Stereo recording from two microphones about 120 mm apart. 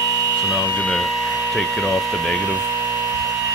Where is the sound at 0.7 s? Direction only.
5° left (ahead or behind).